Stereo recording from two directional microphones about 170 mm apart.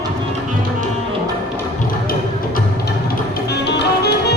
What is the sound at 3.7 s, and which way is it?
Music, 85° left.